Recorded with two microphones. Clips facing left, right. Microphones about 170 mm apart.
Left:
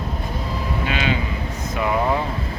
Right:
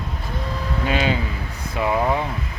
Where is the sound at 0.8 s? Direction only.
40° right (ahead or behind).